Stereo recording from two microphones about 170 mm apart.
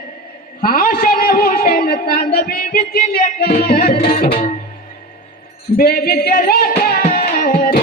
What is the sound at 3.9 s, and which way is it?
Music, 40° left (ahead or behind).